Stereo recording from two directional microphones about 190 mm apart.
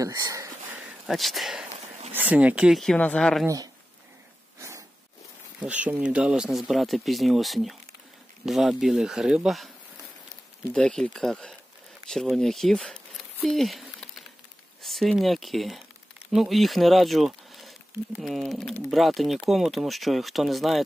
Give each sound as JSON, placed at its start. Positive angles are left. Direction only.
{"t": 0.0, "sound": "a sound", "side_deg": -15}
{"t": 1.0, "sound": "speech", "side_deg": 0}
{"t": 3.4, "sound": "speech", "side_deg": -20}
{"t": 4.6, "sound": "a sound", "side_deg": -15}
{"t": 5.6, "sound": "speech", "side_deg": -5}
{"t": 10.7, "sound": "speech", "side_deg": 5}